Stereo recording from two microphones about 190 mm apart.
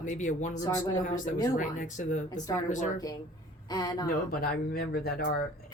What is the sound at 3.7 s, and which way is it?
Speech, 20° left (ahead or behind).